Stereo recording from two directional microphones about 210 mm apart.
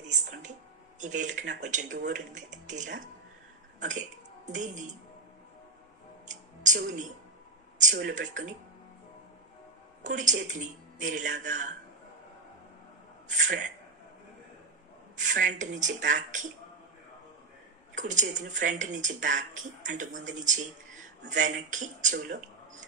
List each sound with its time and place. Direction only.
0.0 s a sound: 35° right (ahead or behind)
2.6 s speech: 35° right (ahead or behind)
4.5 s speech: 35° right (ahead or behind)
6.2 s a sound: 35° right (ahead or behind)
7.8 s speech: 35° right (ahead or behind)
10.0 s speech: 35° right (ahead or behind)
13.3 s speech: 35° right (ahead or behind)
15.4 s speech: 35° right (ahead or behind)
17.9 s speech: 35° right (ahead or behind)